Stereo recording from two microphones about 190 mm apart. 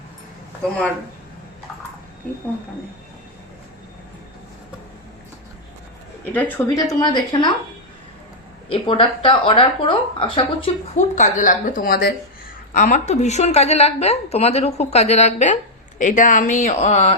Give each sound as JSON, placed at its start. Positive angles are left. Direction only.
{"t": 6.3, "sound": "speech", "side_deg": 15}
{"t": 8.7, "sound": "speech", "side_deg": 25}
{"t": 10.9, "sound": "a woman's voice", "side_deg": 40}